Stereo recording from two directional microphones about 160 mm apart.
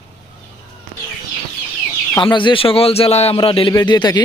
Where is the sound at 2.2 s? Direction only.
30° left (ahead or behind).